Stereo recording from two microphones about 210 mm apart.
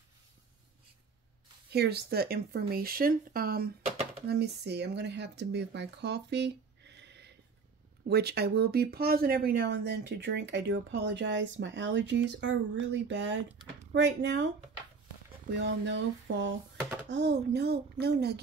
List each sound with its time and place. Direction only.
1.7 s speech: 50° right (ahead or behind)
15.6 s speech: 55° right (ahead or behind)